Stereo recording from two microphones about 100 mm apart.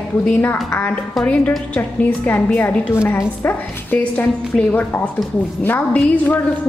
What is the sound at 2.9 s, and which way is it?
A woman's voice, 25° left (ahead or behind).